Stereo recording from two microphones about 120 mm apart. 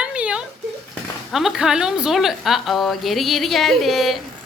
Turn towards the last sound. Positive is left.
turn(degrees=0)  # may be behind; listen again after turning